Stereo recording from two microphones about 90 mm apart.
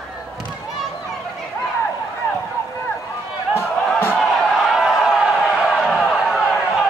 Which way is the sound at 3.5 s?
25° left (ahead or behind).